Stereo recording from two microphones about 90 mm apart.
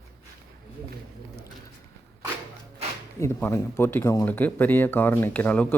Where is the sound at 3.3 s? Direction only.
25° left (ahead or behind).